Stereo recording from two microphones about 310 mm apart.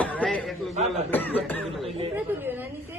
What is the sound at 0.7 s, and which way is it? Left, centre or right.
Speech, right.